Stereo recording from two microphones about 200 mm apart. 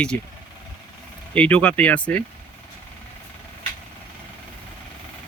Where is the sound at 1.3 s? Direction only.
5° left (ahead or behind).